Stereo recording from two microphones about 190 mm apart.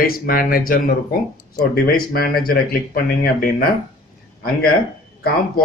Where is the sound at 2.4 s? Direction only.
55° left (ahead or behind).